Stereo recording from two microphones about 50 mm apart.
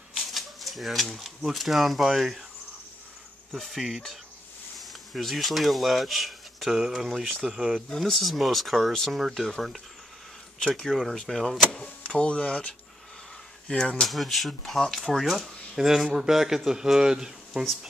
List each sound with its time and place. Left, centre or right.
0.1 s speech: centre
3.5 s speech: centre
10.6 s speech: centre
14.0 s speech: centre